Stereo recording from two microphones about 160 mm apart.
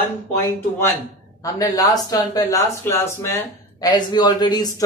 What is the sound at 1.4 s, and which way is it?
Speech, 20° left (ahead or behind).